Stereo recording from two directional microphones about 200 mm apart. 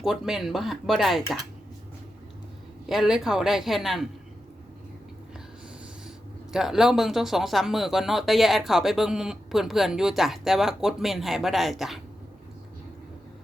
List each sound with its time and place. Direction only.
0.0 s speech: centre (ahead or behind)
2.8 s speech: centre (ahead or behind)
6.5 s speech: centre (ahead or behind)